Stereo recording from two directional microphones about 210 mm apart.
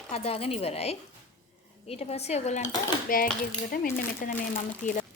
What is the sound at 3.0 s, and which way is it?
Speech, 45° left (ahead or behind).